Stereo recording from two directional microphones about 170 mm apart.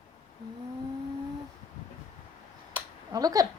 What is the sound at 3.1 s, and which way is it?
Speech, 20° right (ahead or behind).